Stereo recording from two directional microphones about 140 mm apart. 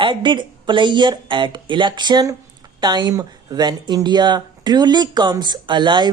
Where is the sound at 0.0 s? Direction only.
35° right (ahead or behind).